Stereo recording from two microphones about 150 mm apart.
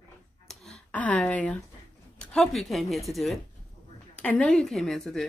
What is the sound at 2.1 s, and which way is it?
Speech, 5° left (ahead or behind).